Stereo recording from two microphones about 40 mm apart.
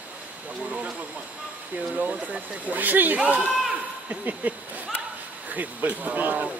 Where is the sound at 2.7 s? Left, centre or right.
Right.